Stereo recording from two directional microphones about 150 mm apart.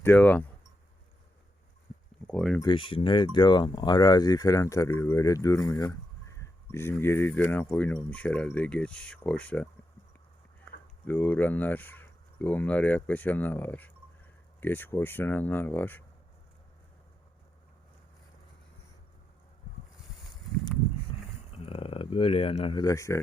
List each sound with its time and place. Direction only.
0.0 s speech: 10° left (ahead or behind)
2.2 s speech: 5° left (ahead or behind)
2.6 s speech: 35° left (ahead or behind); by 9.6 s 10° left (ahead or behind)
11.0 s speech: 15° left (ahead or behind)
21.5 s speech: 40° left (ahead or behind)
22.8 s speech: 20° left (ahead or behind)